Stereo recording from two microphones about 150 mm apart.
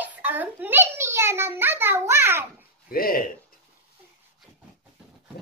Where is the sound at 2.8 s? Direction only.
75° left (ahead or behind).